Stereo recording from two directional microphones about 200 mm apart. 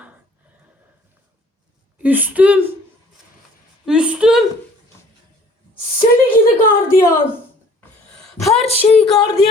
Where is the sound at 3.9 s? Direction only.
5° right (ahead or behind).